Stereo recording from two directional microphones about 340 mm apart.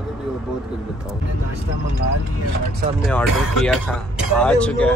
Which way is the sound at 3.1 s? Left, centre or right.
Centre.